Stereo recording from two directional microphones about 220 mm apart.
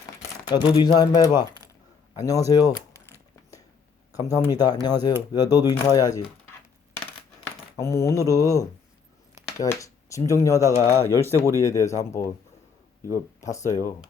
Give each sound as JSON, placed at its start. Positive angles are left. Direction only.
{"t": 0.4, "sound": "speech", "side_deg": 20}
{"t": 4.1, "sound": "speech", "side_deg": 15}
{"t": 7.8, "sound": "speech", "side_deg": 10}